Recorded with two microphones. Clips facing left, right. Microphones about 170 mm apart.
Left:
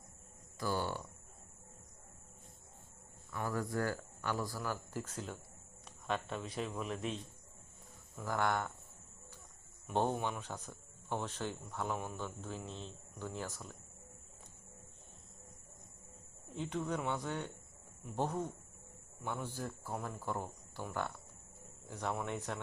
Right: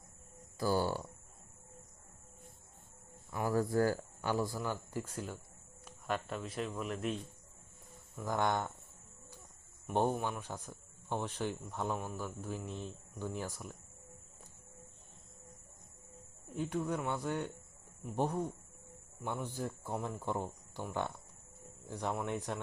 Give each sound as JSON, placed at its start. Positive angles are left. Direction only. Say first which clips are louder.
{"t": 0.6, "sound": "speech", "louder": "right 5 dB", "side_deg": -35}
{"t": 3.5, "sound": "speech", "louder": "right 7 dB", "side_deg": -30}
{"t": 8.2, "sound": "speech", "louder": "right 2 dB", "side_deg": -15}
{"t": 9.9, "sound": "speech", "louder": "right 2 dB", "side_deg": -10}
{"t": 16.6, "sound": "speech", "louder": "right 2 dB", "side_deg": -10}
{"t": 21.8, "sound": "speech", "louder": "right 2 dB", "side_deg": -15}